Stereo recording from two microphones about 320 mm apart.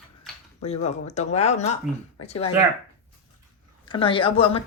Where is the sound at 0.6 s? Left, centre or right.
Centre.